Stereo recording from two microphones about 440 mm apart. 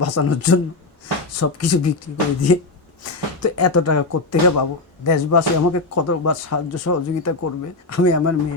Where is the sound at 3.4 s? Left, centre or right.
Left.